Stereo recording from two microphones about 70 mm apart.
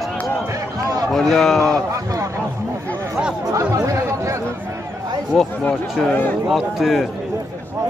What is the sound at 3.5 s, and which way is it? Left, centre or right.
Chatter, right.